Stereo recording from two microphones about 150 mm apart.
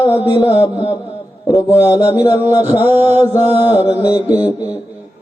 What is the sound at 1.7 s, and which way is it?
A man's voice, 10° right (ahead or behind).